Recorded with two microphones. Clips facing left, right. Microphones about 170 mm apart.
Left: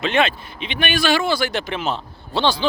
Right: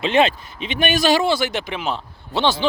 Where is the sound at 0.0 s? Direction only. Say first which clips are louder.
Right 2 dB; 35° right (ahead or behind).